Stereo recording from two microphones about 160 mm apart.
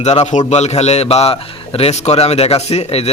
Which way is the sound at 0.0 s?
45° left (ahead or behind).